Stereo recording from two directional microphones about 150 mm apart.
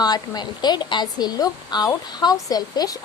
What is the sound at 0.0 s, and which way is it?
Speech, 25° left (ahead or behind).